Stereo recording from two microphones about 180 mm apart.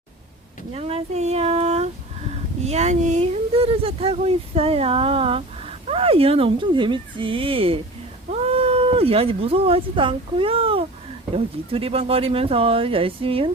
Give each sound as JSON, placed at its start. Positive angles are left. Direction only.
{"t": 0.7, "sound": "speech", "side_deg": -35}